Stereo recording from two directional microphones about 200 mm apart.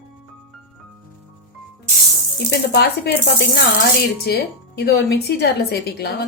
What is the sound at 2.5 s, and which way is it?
Speech, 60° left (ahead or behind).